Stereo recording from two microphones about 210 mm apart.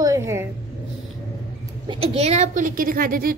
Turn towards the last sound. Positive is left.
turn(degrees=-45)  # may be behind; listen again after turning